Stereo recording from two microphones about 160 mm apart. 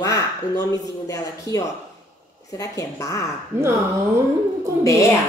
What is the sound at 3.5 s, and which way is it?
Speech, 15° right (ahead or behind).